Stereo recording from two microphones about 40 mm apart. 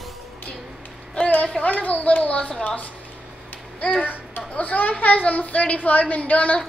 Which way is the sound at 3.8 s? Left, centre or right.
Left.